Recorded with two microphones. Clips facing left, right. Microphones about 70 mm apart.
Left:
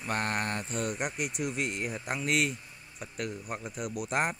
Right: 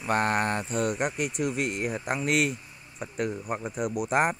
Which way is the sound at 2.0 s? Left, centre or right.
Right.